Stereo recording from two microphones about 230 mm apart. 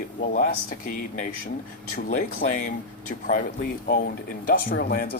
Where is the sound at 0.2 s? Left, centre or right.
Left.